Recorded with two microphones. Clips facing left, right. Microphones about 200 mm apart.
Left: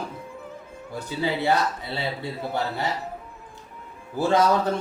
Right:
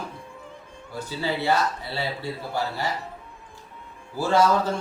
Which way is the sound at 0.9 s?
15° left (ahead or behind).